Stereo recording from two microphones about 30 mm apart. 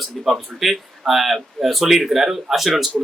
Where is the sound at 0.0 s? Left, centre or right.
Centre.